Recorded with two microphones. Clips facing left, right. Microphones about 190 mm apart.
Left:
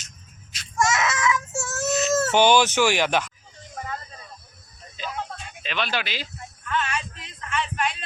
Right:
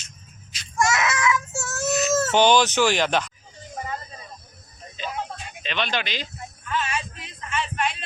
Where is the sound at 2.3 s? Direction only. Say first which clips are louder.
Even; 10° left (ahead or behind).